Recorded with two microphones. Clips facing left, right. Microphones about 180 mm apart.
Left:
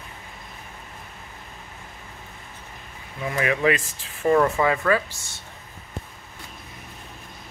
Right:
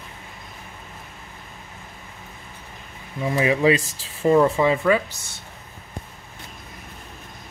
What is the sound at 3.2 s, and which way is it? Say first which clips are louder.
Speech: right 3 dB; 25° right (ahead or behind).